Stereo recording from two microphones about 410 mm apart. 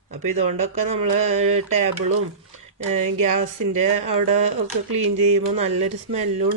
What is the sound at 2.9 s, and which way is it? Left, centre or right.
Speech, centre.